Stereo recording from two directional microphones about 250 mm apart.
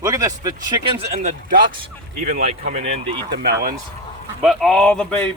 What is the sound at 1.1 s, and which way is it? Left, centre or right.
Speech, right.